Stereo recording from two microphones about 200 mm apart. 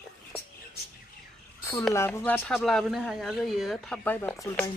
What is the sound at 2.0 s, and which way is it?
Speech, 10° left (ahead or behind).